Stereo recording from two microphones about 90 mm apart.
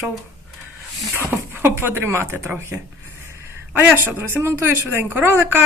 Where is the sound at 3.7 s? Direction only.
20° right (ahead or behind).